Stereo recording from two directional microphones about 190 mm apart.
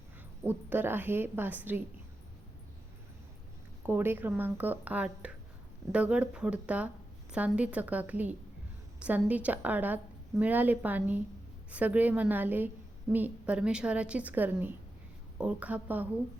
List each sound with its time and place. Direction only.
0.4 s a woman's voice: 10° right (ahead or behind)
3.8 s a woman's voice: 10° right (ahead or behind)